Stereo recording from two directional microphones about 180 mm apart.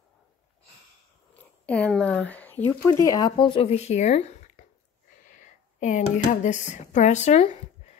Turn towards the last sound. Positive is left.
turn(degrees=35)  # may be behind; listen again after turning